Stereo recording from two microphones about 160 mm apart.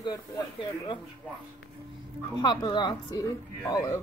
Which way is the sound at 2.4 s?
25° left (ahead or behind).